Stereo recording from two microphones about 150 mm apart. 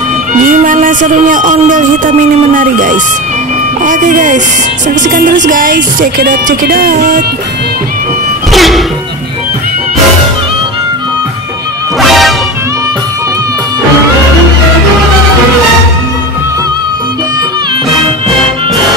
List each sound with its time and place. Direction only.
0.3 s music: 60° right (ahead or behind)
2.5 s speech: 65° right (ahead or behind)
8.5 s music: centre (ahead or behind)
12.0 s music: centre (ahead or behind)